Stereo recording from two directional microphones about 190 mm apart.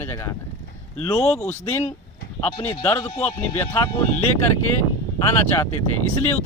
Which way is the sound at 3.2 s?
10° left (ahead or behind).